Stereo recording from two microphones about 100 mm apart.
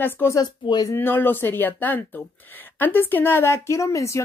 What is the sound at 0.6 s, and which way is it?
Speech, 45° left (ahead or behind).